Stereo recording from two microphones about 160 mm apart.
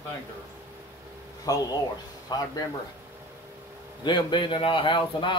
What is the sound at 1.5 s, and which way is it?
Speech, 20° left (ahead or behind).